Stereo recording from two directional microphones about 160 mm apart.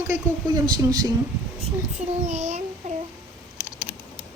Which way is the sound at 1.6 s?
45° right (ahead or behind).